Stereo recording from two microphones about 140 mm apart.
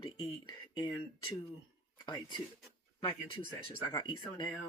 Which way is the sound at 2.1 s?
30° left (ahead or behind).